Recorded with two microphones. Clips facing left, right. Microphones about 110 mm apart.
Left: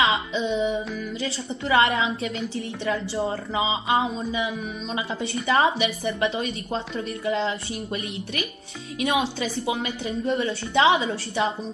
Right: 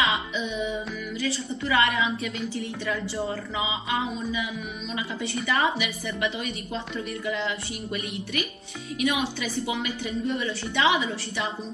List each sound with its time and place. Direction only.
0.0 s music: 30° left (ahead or behind)
1.7 s a woman's voice: 30° left (ahead or behind)
5.5 s a woman's voice: 30° left (ahead or behind)